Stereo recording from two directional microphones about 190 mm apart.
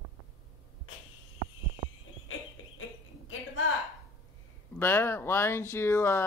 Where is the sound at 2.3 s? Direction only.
90° left.